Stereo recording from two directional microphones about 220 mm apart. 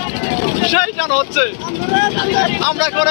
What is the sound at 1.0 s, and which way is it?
Speech, 30° left (ahead or behind).